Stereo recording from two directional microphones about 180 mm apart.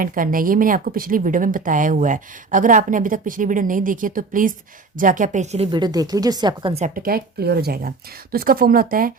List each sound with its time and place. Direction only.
0.0 s speech: 50° right (ahead or behind)
5.7 s speech: 20° right (ahead or behind)
6.8 s speech: 50° right (ahead or behind)